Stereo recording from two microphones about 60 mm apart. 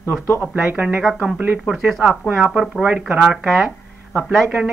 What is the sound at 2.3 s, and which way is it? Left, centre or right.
Speech, right.